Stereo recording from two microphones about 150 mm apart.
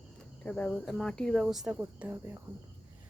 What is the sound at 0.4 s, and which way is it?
Speech, 5° left (ahead or behind).